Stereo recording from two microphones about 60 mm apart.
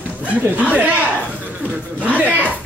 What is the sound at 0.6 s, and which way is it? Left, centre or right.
Speech, centre.